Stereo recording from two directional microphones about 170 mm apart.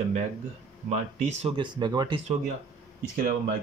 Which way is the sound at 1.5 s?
25° right (ahead or behind).